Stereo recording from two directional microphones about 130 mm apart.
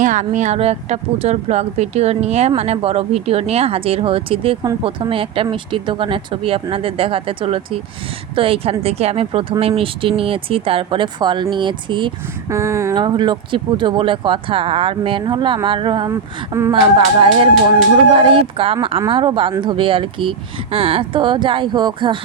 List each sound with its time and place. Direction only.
0.0 s a woman's voice: 75° right (ahead or behind); by 12.1 s 40° right (ahead or behind)
12.5 s speech: 20° right (ahead or behind)
12.9 s speech: 35° right (ahead or behind)
16.0 s speech: 25° right (ahead or behind)
16.8 s speech: 40° right (ahead or behind)